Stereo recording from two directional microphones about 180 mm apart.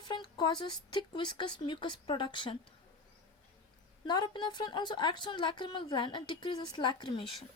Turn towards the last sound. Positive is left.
turn(degrees=25)  # may be behind; listen again after turning